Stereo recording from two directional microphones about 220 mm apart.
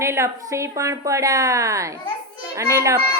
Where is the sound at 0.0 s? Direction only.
10° right (ahead or behind).